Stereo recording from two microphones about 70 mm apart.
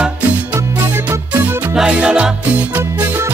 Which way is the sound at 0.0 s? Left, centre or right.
Centre.